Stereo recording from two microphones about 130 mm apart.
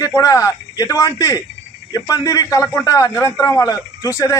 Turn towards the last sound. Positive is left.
turn(degrees=25)  # may be behind; listen again after turning